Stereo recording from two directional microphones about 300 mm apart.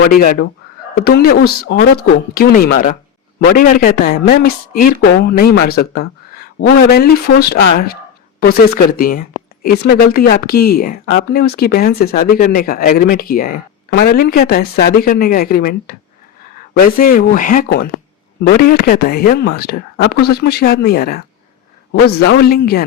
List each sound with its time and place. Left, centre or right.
0.1 s speech: left